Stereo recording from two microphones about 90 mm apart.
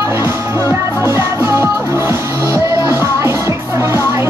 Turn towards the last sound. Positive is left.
turn(degrees=-30)  # may be behind; listen again after turning